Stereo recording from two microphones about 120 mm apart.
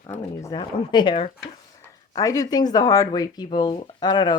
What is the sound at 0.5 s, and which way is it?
Speech, 40° left (ahead or behind).